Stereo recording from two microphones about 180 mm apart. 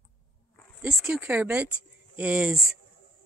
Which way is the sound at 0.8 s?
5° right (ahead or behind).